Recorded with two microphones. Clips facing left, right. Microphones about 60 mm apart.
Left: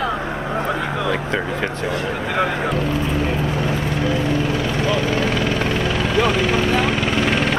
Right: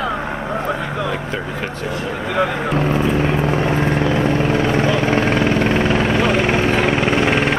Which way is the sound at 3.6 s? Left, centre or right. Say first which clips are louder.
Right 4 dB; right.